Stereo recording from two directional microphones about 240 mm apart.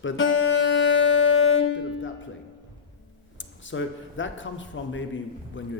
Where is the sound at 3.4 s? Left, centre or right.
Left.